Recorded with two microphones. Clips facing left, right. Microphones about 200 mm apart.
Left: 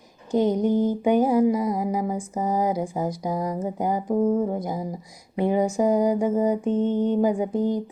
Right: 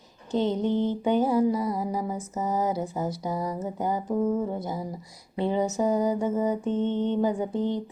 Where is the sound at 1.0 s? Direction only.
15° left (ahead or behind).